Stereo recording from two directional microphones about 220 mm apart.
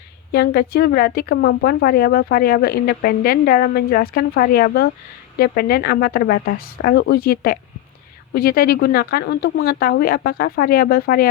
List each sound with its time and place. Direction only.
0.3 s a woman's voice: 45° left (ahead or behind)